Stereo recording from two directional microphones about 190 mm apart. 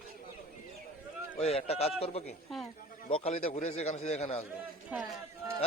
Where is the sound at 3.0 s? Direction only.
30° left (ahead or behind).